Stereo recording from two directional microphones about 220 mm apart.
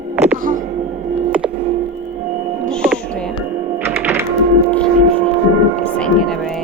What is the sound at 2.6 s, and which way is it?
Music, centre (ahead or behind).